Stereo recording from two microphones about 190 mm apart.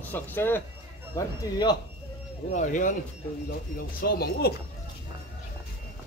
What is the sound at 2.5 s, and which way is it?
Speech, 40° left (ahead or behind).